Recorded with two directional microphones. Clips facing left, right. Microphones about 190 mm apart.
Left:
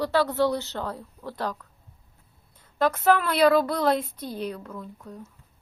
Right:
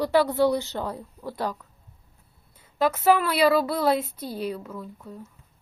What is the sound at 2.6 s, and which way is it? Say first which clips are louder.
A woman's voice: even; 10° right (ahead or behind).